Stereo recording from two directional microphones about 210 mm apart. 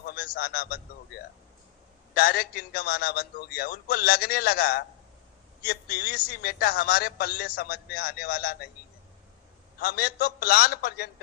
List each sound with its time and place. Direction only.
0.0 s a man's voice: 45° left (ahead or behind)
2.1 s a man's voice: 45° left (ahead or behind)
9.8 s a man's voice: 45° left (ahead or behind)